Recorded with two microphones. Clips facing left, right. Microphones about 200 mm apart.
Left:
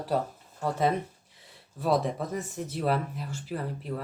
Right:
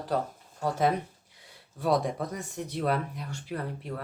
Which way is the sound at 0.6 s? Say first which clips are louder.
Even; centre (ahead or behind).